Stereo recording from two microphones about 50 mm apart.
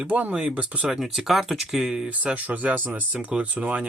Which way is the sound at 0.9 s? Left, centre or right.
Centre.